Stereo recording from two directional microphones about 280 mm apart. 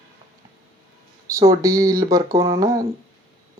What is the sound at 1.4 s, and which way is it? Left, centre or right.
Speech, centre.